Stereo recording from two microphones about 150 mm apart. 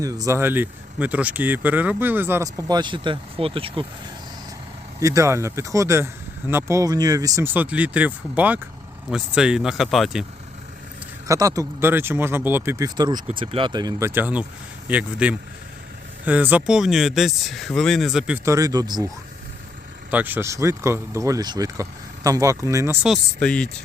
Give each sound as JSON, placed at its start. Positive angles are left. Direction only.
{"t": 0.0, "sound": "speech", "side_deg": -25}
{"t": 4.9, "sound": "speech", "side_deg": -20}
{"t": 11.3, "sound": "speech", "side_deg": -20}
{"t": 14.1, "sound": "speech", "side_deg": -10}
{"t": 18.4, "sound": "speech", "side_deg": -20}
{"t": 20.1, "sound": "speech", "side_deg": -10}
{"t": 23.0, "sound": "speech", "side_deg": 0}